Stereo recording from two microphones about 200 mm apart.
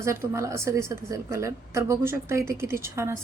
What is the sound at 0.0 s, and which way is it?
Speech, 15° right (ahead or behind).